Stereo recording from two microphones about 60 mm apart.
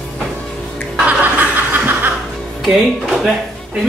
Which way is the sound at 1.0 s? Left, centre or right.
Right.